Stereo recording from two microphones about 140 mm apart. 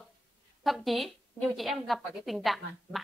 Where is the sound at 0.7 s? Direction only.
Centre (ahead or behind).